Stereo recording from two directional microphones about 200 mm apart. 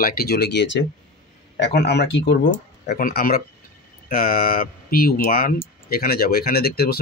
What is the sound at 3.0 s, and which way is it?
Speech, 45° left (ahead or behind).